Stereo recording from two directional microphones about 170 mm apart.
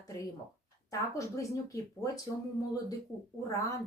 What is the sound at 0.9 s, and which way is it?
Speech, 20° left (ahead or behind).